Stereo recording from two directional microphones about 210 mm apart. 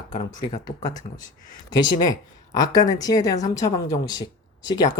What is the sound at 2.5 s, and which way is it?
A woman's voice, 20° left (ahead or behind).